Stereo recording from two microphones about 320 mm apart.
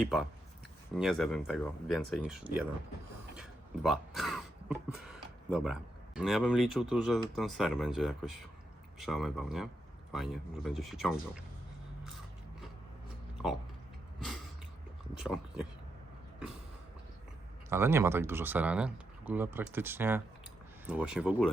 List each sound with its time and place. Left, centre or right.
0.0 s speech: centre
3.8 s speech: centre
15.2 s speech: centre
17.7 s speech: centre